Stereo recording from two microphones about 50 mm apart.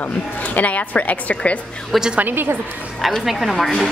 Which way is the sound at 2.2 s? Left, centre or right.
Right.